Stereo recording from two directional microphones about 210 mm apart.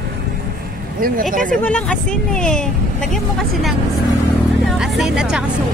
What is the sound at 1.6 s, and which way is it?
Speech, 5° left (ahead or behind).